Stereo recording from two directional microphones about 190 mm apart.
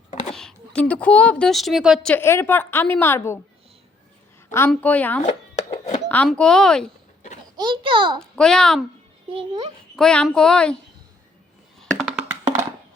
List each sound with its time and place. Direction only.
0.3 s a woman's voice: 5° left (ahead or behind)
4.7 s a woman's voice: 10° left (ahead or behind)
5.7 s a sound: 35° left (ahead or behind)
6.1 s speech: 10° left (ahead or behind)
7.5 s a child's voice: 25° right (ahead or behind)
8.2 s speech: 5° left (ahead or behind)
9.9 s speech: 5° left (ahead or behind)
11.8 s a sound: centre (ahead or behind)
12.3 s music: 15° right (ahead or behind)